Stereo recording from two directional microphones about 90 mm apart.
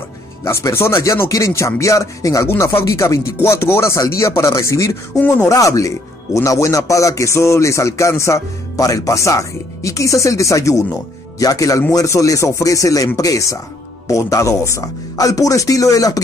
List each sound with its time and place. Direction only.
0.5 s speech: 30° left (ahead or behind)
5.2 s speech: 20° left (ahead or behind)
5.5 s speech: 40° left (ahead or behind)